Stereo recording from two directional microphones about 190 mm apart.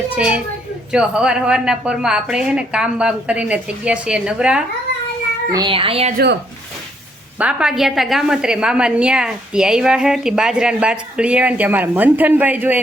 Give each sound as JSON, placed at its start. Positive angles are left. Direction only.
{"t": 0.2, "sound": "a woman's voice", "side_deg": -5}
{"t": 5.5, "sound": "speech", "side_deg": -20}
{"t": 7.3, "sound": "a woman's voice", "side_deg": -5}